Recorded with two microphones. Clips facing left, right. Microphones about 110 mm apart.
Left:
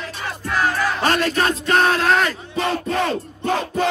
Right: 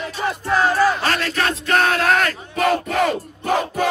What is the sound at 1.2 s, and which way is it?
Music, 40° left (ahead or behind).